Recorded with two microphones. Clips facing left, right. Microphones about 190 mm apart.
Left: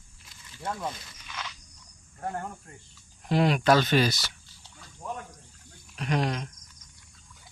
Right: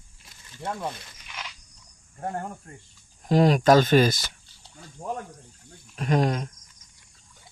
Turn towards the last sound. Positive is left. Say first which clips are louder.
# right 5 dB
turn(degrees=-45)  # may be behind; listen again after turning